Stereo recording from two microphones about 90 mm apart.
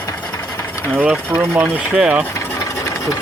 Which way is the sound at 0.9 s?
15° right (ahead or behind).